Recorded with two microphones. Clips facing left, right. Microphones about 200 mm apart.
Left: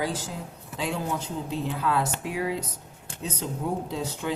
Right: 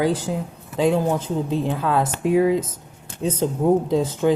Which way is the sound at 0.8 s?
45° right (ahead or behind).